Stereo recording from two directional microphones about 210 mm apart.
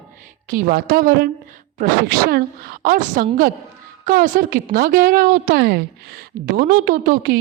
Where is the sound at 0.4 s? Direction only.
40° right (ahead or behind).